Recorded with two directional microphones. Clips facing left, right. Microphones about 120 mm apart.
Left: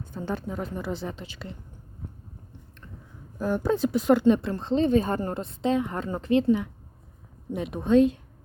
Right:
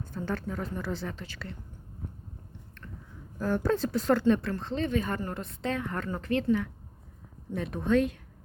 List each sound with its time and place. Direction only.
0.1 s speech: 20° left (ahead or behind)
3.3 s speech: 15° left (ahead or behind)